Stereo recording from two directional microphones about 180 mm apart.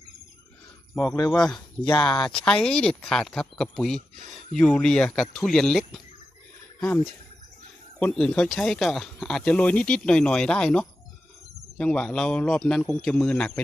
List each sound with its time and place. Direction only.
0.9 s speech: 15° left (ahead or behind)
2.2 s speech: 5° left (ahead or behind)